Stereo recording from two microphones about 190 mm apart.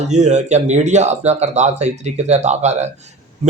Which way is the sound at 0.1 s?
35° right (ahead or behind).